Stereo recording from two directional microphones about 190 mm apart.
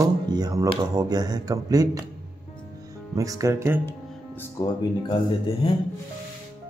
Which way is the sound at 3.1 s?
20° right (ahead or behind).